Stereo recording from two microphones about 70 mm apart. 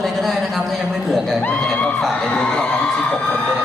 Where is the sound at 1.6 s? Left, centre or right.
Centre.